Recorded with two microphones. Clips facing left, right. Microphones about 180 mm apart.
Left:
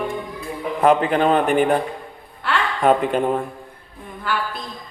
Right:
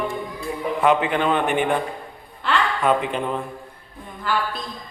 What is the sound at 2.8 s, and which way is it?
Speech, 40° left (ahead or behind).